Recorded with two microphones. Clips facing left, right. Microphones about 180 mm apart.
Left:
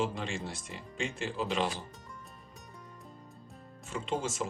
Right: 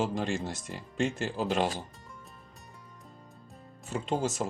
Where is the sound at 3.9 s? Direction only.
40° right (ahead or behind).